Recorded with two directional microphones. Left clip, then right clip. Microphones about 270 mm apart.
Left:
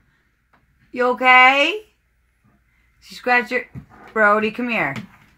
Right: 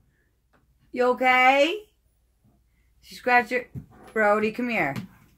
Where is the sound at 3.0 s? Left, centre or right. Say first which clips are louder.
Left 3 dB; left.